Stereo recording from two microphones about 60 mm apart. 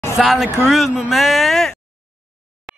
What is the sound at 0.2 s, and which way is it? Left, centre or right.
Speech, centre.